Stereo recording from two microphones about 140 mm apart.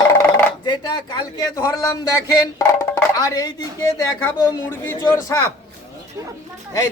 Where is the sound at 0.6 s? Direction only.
35° left (ahead or behind).